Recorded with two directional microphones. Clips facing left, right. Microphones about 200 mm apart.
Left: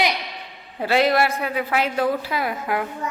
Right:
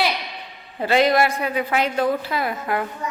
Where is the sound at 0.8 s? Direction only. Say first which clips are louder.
Right 1 dB; 5° left (ahead or behind).